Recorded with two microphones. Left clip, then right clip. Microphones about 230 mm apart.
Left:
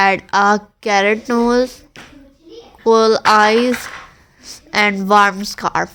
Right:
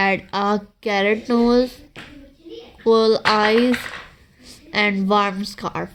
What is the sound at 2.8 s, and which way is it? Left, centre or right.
A woman's voice, centre.